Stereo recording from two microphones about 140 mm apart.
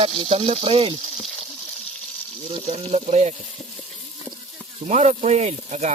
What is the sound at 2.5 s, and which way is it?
Speech, 45° right (ahead or behind).